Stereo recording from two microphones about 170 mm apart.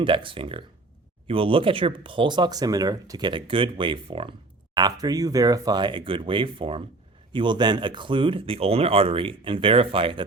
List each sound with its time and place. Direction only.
0.0 s speech: 30° right (ahead or behind)